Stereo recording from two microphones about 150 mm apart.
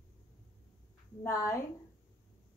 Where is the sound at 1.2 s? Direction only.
15° left (ahead or behind).